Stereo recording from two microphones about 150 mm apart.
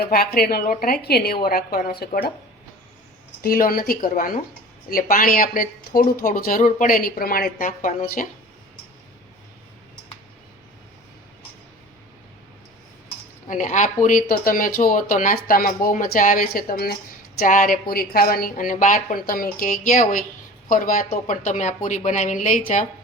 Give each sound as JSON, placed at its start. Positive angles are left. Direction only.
{"t": 0.1, "sound": "a woman's voice", "side_deg": 90}
{"t": 1.5, "sound": "speech", "side_deg": 80}
{"t": 3.4, "sound": "speech", "side_deg": 75}
{"t": 13.5, "sound": "speech", "side_deg": 55}
{"t": 17.4, "sound": "speech", "side_deg": 60}
{"t": 17.9, "sound": "speech", "side_deg": 90}